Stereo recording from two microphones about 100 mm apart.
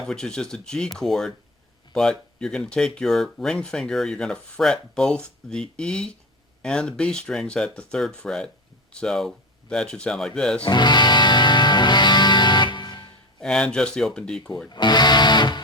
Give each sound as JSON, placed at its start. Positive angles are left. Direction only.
{"t": 0.0, "sound": "speech", "side_deg": 5}
{"t": 10.7, "sound": "music", "side_deg": 45}
{"t": 13.4, "sound": "speech", "side_deg": 10}
{"t": 14.7, "sound": "speech", "side_deg": 45}